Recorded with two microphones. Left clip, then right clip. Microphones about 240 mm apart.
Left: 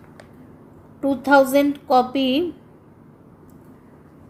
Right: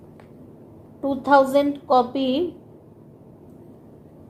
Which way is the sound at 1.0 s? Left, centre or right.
Left.